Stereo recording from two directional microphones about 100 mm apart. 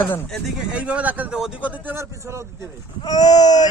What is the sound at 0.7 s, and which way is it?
Speech, 15° right (ahead or behind).